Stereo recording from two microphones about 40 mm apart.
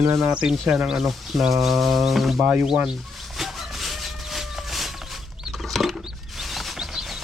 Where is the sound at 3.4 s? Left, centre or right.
Centre.